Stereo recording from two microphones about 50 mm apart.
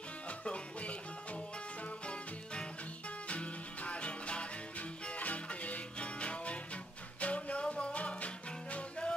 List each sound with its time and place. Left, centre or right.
0.3 s music: left